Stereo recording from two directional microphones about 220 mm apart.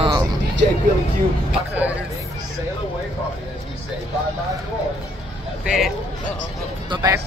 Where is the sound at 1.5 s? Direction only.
5° right (ahead or behind).